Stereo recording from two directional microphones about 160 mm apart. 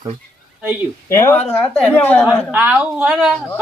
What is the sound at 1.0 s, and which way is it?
Speech, 15° left (ahead or behind).